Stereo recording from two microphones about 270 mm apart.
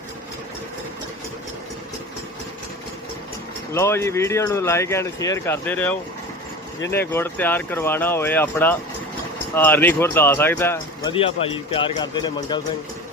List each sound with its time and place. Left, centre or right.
3.7 s speech: centre
11.1 s speech: left